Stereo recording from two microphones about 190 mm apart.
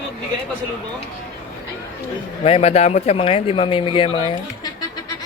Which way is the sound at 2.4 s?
30° left (ahead or behind).